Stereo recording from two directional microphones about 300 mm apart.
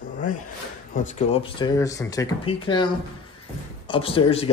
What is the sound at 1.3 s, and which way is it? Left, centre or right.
A man's voice, centre.